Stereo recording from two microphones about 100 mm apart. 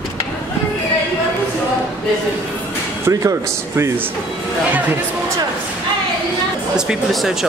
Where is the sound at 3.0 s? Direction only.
30° right (ahead or behind).